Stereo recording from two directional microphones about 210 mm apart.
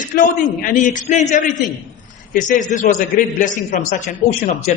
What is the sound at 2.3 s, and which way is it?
A man's voice, 35° left (ahead or behind).